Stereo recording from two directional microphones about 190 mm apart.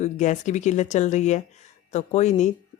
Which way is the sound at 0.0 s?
40° left (ahead or behind).